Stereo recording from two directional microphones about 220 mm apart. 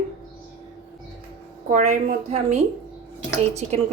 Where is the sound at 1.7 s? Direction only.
35° right (ahead or behind).